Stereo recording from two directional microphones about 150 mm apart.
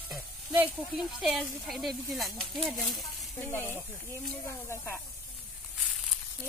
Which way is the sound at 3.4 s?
15° left (ahead or behind).